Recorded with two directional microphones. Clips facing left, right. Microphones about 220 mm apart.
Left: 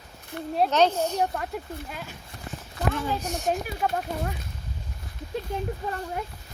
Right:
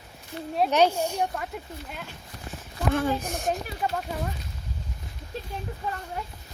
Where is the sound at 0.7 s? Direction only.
10° right (ahead or behind).